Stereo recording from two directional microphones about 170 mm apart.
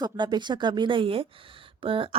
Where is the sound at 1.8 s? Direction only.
30° right (ahead or behind).